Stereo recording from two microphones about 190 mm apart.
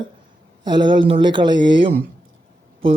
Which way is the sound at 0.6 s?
25° right (ahead or behind).